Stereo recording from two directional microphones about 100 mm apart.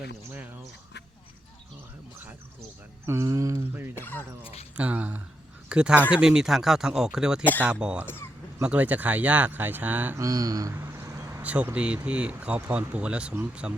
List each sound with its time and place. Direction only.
3.1 s speech: 30° right (ahead or behind)
3.9 s speech: 20° left (ahead or behind)
4.8 s speech: 15° right (ahead or behind)
8.0 s speech: 20° left (ahead or behind)
8.6 s speech: 15° right (ahead or behind)
10.2 s a sound: 35° right (ahead or behind)
11.4 s speech: 15° right (ahead or behind)